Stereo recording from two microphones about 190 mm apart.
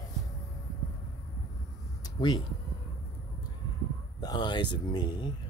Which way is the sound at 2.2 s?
25° left (ahead or behind).